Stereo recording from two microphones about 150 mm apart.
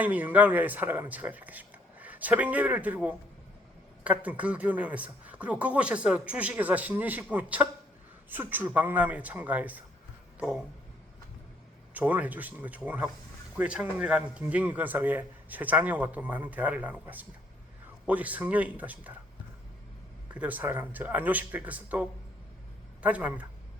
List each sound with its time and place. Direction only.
0.0 s speech: 10° right (ahead or behind)
11.9 s speech: 10° right (ahead or behind)
20.3 s speech: 10° right (ahead or behind)
23.0 s speech: 10° right (ahead or behind)